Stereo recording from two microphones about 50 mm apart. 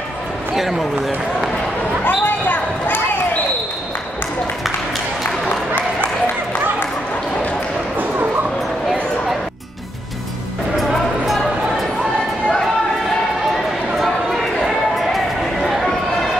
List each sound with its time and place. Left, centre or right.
0.6 s speech: centre
2.0 s basketball bounce: left
10.8 s music: centre
13.9 s a sound: centre